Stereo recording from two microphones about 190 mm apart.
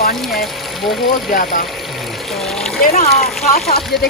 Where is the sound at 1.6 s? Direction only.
Centre (ahead or behind).